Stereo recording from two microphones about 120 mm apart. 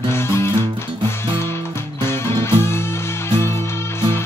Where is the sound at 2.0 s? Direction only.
20° left (ahead or behind).